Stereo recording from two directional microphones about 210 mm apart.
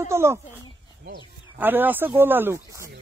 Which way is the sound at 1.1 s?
50° right (ahead or behind).